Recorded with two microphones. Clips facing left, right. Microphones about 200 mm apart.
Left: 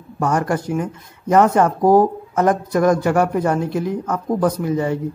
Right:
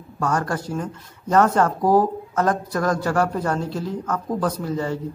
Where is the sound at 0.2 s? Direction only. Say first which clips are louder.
Left 4 dB; 20° left (ahead or behind).